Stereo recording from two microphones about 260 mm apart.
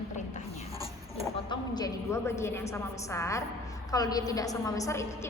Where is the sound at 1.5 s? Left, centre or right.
Centre.